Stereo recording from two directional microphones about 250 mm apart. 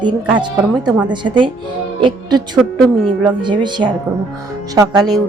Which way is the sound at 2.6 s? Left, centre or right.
Centre.